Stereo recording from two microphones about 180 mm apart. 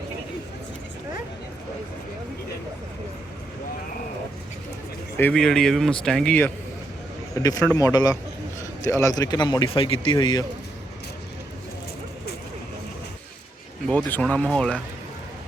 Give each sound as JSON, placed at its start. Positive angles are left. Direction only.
{"t": 5.1, "sound": "speech", "side_deg": 5}
{"t": 7.3, "sound": "speech", "side_deg": 20}
{"t": 13.8, "sound": "speech", "side_deg": 5}